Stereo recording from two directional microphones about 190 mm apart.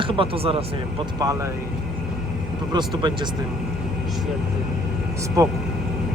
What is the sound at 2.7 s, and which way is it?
Speech, 25° right (ahead or behind).